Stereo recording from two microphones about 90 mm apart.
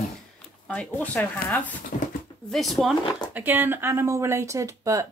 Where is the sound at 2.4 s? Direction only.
Centre (ahead or behind).